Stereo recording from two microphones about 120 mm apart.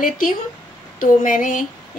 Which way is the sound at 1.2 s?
90° left.